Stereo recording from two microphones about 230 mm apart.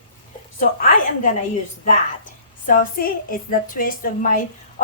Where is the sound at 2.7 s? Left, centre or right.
Left.